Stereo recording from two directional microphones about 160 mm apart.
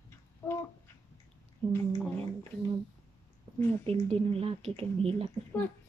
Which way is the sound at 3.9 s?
35° right (ahead or behind).